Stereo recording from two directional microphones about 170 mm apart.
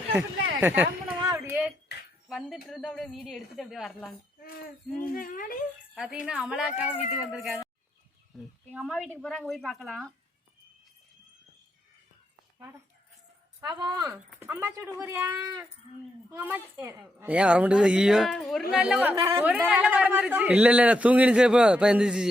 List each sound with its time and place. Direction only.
0.1 s speech: 10° right (ahead or behind)
1.2 s a sound: 20° right (ahead or behind)
2.6 s a woman's voice: centre (ahead or behind)
4.4 s jingle bell: 60° left (ahead or behind)
5.0 s speech: 55° left (ahead or behind)
5.9 s a woman's voice: 5° right (ahead or behind)
13.6 s a man's voice: 25° right (ahead or behind); by 19.1 s 5° right (ahead or behind)
19.1 s speech: 20° right (ahead or behind)
19.5 s a man's voice: 5° right (ahead or behind)